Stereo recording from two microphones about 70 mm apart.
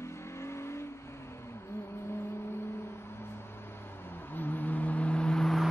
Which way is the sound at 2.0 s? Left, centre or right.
Left.